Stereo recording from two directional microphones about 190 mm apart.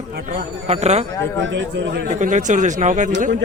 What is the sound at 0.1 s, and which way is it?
Speech, 55° right (ahead or behind).